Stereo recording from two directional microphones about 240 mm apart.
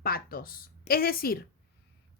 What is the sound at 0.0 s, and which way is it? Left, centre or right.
Speech, left.